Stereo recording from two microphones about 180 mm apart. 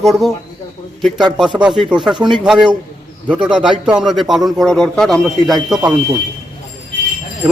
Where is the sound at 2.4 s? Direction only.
5° right (ahead or behind).